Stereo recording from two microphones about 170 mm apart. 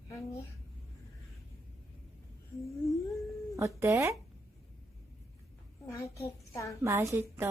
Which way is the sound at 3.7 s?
15° right (ahead or behind).